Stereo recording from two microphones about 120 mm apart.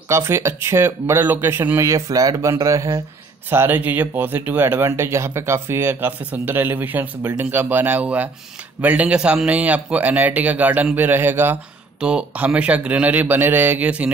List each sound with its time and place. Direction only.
0.1 s a man's voice: 25° right (ahead or behind)